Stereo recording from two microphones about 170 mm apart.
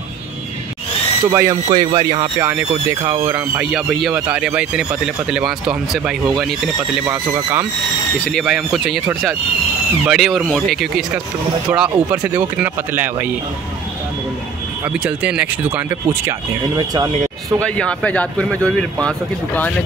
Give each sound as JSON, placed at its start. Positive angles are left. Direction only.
{"t": 1.3, "sound": "speech", "side_deg": -20}
{"t": 2.3, "sound": "speech", "side_deg": -15}
{"t": 7.1, "sound": "speech", "side_deg": -15}
{"t": 8.3, "sound": "speech", "side_deg": 0}
{"t": 10.0, "sound": "speech", "side_deg": 0}
{"t": 14.9, "sound": "speech", "side_deg": -5}
{"t": 16.3, "sound": "speech", "side_deg": -20}
{"t": 17.6, "sound": "speech", "side_deg": 5}